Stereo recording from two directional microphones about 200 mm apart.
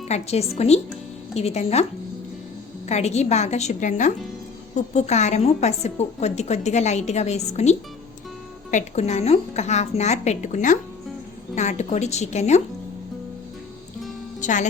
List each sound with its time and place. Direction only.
0.1 s a woman's voice: 30° left (ahead or behind)
2.9 s a woman's voice: 35° left (ahead or behind)
14.4 s speech: 40° left (ahead or behind)